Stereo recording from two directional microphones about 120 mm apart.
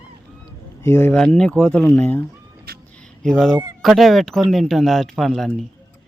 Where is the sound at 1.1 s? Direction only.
5° left (ahead or behind).